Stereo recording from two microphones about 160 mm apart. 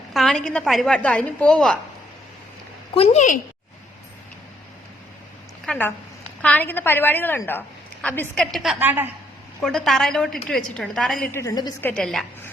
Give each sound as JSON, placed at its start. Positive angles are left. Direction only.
{"t": 0.1, "sound": "a woman's voice", "side_deg": 0}
{"t": 2.9, "sound": "a woman's voice", "side_deg": 40}
{"t": 5.6, "sound": "a woman's voice", "side_deg": 10}
{"t": 8.5, "sound": "a woman's voice", "side_deg": 0}
{"t": 9.6, "sound": "a woman's voice", "side_deg": 0}
{"t": 11.3, "sound": "a woman's voice", "side_deg": 20}
{"t": 11.8, "sound": "a woman's voice", "side_deg": 10}